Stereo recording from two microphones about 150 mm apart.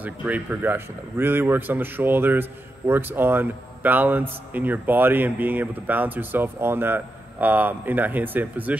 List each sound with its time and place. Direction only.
0.0 s speech: 10° right (ahead or behind)